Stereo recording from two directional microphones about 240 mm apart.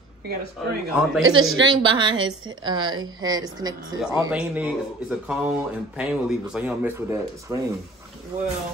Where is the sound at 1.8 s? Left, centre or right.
Centre.